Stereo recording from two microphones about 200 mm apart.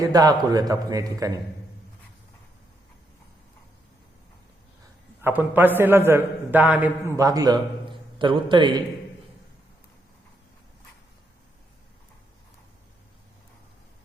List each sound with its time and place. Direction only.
0.0 s a man's voice: 20° right (ahead or behind)
5.2 s a man's voice: 10° right (ahead or behind)